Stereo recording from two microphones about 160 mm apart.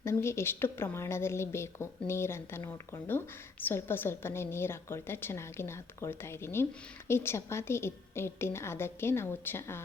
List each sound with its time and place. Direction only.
0.0 s a woman's voice: 15° left (ahead or behind)